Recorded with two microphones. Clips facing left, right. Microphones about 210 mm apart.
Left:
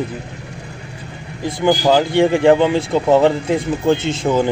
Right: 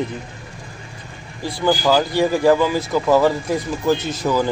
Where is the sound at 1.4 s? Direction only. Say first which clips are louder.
Left 3 dB; 20° left (ahead or behind).